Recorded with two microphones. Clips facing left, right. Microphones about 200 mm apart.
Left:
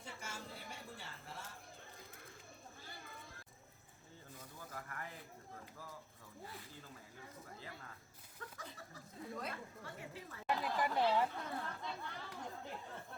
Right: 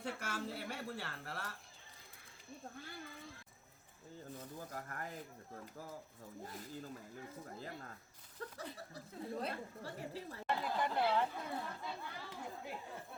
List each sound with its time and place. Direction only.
0.0 s speech: 65° right (ahead or behind)
2.7 s speech: 65° right (ahead or behind)
4.5 s speech: 40° right (ahead or behind)
6.4 s speech: 45° right (ahead or behind)
8.4 s chuckle: 35° right (ahead or behind)
9.3 s speech: 30° right (ahead or behind)
10.4 s speech: centre (ahead or behind)
11.3 s speech: 10° right (ahead or behind)